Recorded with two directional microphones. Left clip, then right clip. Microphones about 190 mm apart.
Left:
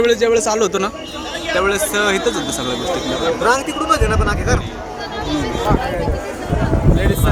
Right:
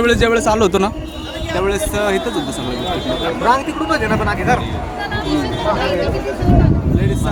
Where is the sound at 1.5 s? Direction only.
15° right (ahead or behind).